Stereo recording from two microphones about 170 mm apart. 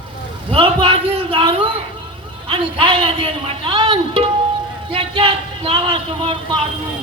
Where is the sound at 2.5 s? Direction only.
30° right (ahead or behind).